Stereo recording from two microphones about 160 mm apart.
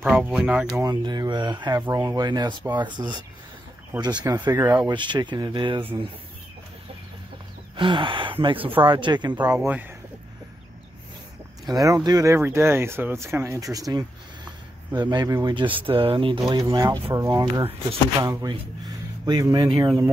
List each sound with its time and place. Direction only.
0.0 s speech: 5° right (ahead or behind)
0.8 s speech: 25° right (ahead or behind)
4.9 s speech: 30° right (ahead or behind)
7.7 s speech: 30° right (ahead or behind)
9.7 s speech: 10° right (ahead or behind)
11.7 s speech: 20° right (ahead or behind)